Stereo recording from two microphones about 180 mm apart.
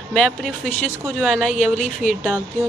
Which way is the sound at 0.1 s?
Centre (ahead or behind).